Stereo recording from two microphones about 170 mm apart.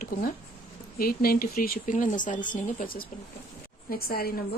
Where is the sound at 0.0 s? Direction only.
60° left (ahead or behind).